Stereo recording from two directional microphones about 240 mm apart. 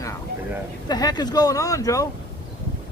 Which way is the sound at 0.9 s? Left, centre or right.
Centre.